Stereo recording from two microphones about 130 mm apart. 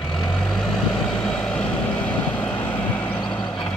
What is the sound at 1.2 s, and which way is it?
Vehicle, 5° left (ahead or behind).